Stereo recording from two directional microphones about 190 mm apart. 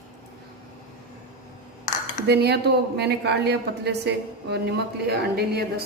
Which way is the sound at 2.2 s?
60° right (ahead or behind).